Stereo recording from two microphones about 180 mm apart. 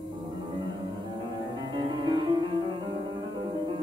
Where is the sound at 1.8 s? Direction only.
25° right (ahead or behind).